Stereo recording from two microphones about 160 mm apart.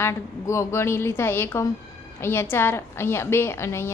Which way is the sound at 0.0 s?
20° left (ahead or behind).